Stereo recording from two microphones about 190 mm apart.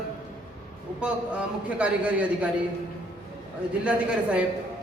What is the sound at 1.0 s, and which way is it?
A man's voice, 5° right (ahead or behind).